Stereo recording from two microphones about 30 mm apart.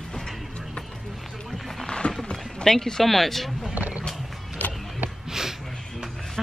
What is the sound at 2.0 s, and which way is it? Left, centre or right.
Run, left.